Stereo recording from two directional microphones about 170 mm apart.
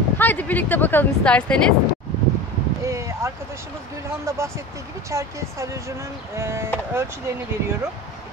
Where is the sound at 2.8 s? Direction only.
15° right (ahead or behind).